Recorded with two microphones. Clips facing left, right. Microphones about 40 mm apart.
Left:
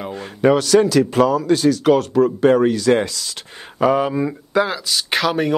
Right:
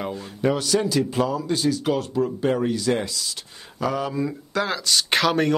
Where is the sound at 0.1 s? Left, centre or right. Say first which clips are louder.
Left 11 dB; left.